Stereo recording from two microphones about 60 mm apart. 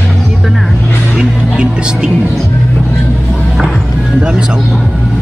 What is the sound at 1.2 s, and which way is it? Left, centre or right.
Music, centre.